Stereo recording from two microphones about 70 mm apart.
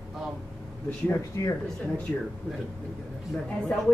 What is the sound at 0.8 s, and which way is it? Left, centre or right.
Speech, left.